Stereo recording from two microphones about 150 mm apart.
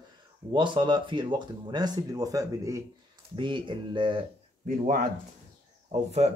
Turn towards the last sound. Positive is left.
turn(degrees=-45)  # may be behind; listen again after turning